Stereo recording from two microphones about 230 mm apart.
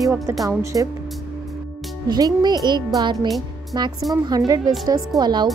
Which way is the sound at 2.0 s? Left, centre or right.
Centre.